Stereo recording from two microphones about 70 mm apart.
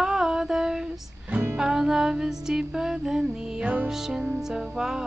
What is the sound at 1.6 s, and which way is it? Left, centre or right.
Music, centre.